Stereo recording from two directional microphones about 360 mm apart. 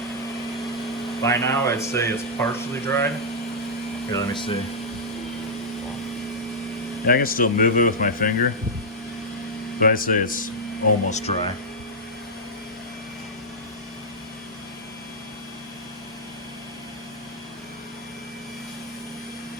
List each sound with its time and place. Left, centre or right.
1.2 s speech: centre
4.1 s speech: centre
7.1 s speech: left
9.8 s speech: left